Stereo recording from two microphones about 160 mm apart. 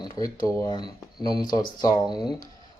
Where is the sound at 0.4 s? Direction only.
25° left (ahead or behind).